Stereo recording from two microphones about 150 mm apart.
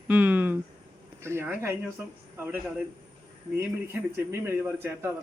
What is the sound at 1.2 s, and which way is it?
A man's voice, 15° right (ahead or behind).